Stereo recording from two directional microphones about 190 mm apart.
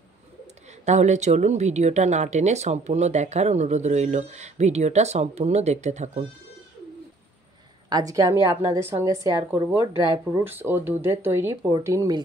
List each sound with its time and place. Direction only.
0.8 s speech: 40° right (ahead or behind)
7.9 s a woman's voice: 20° right (ahead or behind)